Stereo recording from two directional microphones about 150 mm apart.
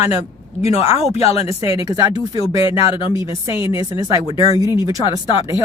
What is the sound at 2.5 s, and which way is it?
Speech, 35° left (ahead or behind).